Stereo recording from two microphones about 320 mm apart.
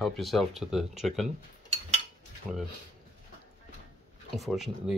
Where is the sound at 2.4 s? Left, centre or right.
Centre.